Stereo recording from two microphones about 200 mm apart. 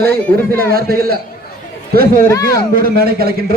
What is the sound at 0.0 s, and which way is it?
Speech, 50° right (ahead or behind).